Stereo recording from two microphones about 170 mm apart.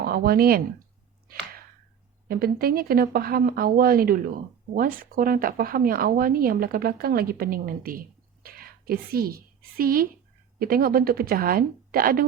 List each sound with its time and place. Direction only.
0.0 s speech: 60° right (ahead or behind)
2.2 s a woman's voice: 60° right (ahead or behind)